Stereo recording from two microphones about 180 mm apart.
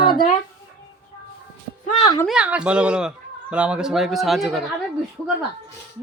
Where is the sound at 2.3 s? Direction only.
5° right (ahead or behind).